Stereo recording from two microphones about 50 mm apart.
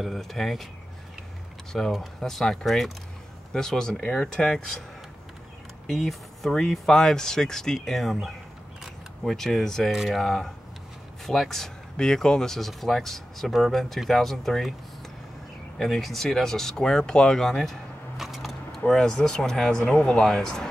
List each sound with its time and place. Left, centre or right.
0.0 s speech: centre
1.7 s speech: centre
5.9 s speech: centre
9.8 s speech: centre
10.2 s speech: centre
15.8 s speech: centre
18.9 s speech: centre